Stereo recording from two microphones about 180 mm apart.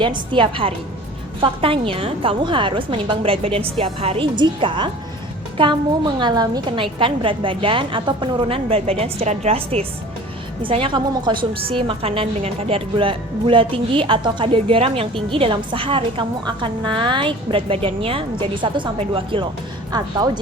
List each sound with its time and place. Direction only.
0.0 s a woman's voice: 25° right (ahead or behind)